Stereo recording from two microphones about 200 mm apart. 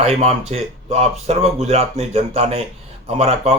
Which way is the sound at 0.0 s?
30° right (ahead or behind).